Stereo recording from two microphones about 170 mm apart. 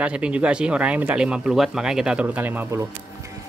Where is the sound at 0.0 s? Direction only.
5° right (ahead or behind).